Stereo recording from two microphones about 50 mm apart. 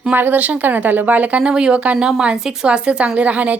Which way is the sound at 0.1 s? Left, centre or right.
Right.